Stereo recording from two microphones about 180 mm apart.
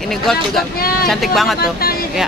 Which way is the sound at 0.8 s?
55° left (ahead or behind).